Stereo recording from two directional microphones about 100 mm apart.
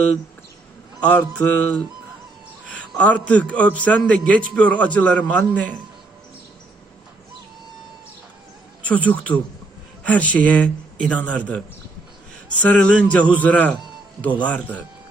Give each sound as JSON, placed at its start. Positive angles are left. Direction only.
{"t": 1.0, "sound": "a man's voice", "side_deg": 15}
{"t": 8.8, "sound": "a man's voice", "side_deg": 15}